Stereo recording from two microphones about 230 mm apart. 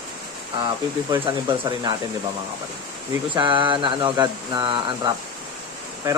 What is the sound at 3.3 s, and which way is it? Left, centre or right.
Speech, right.